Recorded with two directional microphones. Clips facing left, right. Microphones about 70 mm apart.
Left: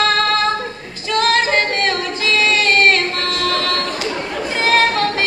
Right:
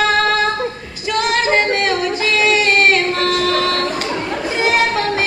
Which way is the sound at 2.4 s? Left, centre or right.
Centre.